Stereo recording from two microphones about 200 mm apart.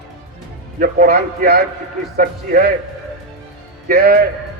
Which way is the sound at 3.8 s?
50° right (ahead or behind).